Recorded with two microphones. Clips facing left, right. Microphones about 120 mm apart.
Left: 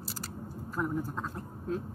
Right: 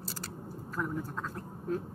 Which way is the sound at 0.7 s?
20° left (ahead or behind).